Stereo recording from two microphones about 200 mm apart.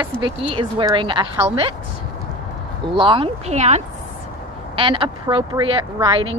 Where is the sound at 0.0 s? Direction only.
25° right (ahead or behind).